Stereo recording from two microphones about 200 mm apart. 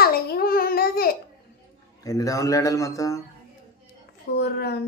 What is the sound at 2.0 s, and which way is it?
Speech, 15° left (ahead or behind).